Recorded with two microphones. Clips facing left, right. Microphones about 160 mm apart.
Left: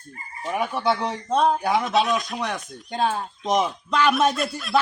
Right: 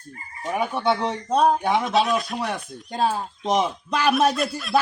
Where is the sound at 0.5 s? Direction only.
Centre (ahead or behind).